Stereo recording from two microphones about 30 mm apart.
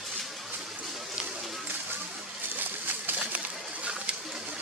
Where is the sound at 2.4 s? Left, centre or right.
Right.